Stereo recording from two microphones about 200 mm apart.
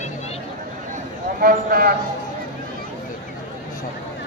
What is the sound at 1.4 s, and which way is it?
Speech, 45° right (ahead or behind).